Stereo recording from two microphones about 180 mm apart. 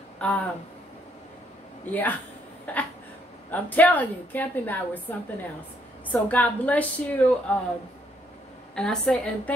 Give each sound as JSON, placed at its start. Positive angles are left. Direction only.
{"t": 0.2, "sound": "speech", "side_deg": 10}
{"t": 1.9, "sound": "a woman's voice", "side_deg": 10}
{"t": 2.6, "sound": "a sound", "side_deg": 10}
{"t": 3.4, "sound": "a woman's voice", "side_deg": 10}
{"t": 6.0, "sound": "a woman's voice", "side_deg": 10}
{"t": 8.7, "sound": "a woman's voice", "side_deg": 5}